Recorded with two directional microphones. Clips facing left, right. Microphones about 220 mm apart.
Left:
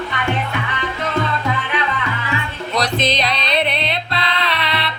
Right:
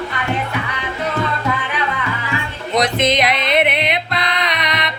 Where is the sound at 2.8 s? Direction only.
20° right (ahead or behind).